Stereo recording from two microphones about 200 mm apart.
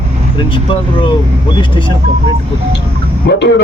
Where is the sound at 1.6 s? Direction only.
25° left (ahead or behind).